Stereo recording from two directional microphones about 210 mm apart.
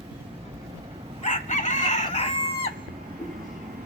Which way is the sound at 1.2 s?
35° left (ahead or behind).